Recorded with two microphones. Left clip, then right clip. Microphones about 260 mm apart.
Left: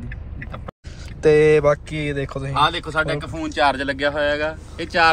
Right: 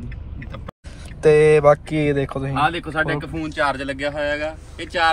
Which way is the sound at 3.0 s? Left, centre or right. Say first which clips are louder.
Even; left.